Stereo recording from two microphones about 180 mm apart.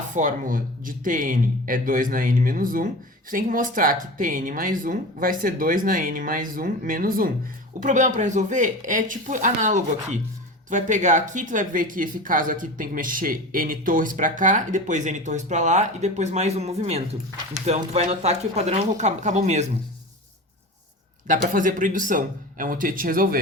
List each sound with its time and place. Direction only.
0.1 s speech: 45° right (ahead or behind)
21.2 s speech: 50° right (ahead or behind)